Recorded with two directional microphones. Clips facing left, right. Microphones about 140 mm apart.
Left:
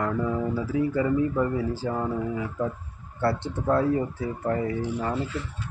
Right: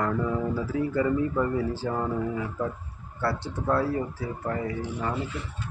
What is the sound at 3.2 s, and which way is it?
Speech, 25° left (ahead or behind).